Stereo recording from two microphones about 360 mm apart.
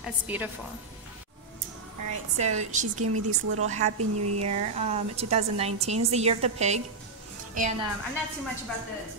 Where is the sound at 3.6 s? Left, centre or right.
Centre.